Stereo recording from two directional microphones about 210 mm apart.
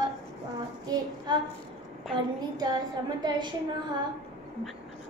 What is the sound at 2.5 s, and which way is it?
A woman's voice, 20° right (ahead or behind).